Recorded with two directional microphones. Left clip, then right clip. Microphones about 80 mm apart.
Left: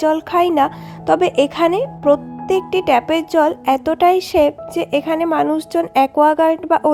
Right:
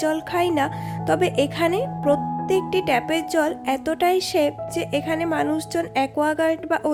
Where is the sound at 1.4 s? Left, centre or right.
Left.